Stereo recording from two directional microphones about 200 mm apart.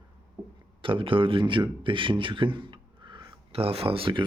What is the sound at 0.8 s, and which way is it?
Speech, 25° right (ahead or behind).